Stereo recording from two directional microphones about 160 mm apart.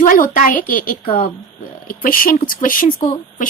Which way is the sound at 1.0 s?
35° left (ahead or behind).